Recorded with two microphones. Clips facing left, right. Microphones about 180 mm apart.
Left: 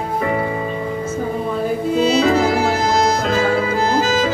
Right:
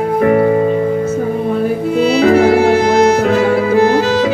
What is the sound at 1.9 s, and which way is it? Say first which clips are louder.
Music: right 5 dB; 60° right (ahead or behind).